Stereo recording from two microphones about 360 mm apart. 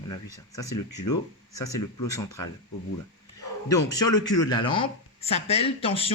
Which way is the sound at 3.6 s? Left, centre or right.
Centre.